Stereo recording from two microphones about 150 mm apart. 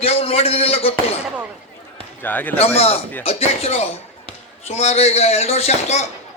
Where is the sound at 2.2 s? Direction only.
10° left (ahead or behind).